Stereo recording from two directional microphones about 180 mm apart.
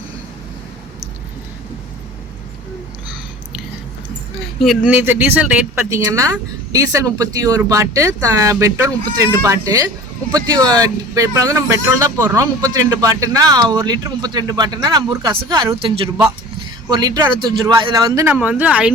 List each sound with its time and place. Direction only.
4.9 s speech: 10° right (ahead or behind)
5.9 s speech: 15° right (ahead or behind)
18.3 s speech: 10° right (ahead or behind)